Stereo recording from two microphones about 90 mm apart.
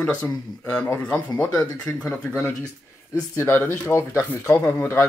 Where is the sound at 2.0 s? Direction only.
20° left (ahead or behind).